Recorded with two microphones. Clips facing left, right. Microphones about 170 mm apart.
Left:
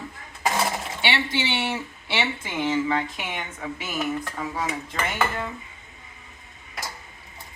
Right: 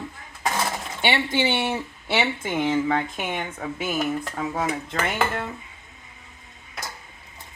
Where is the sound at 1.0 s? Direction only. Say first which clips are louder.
Right 5 dB; 50° right (ahead or behind).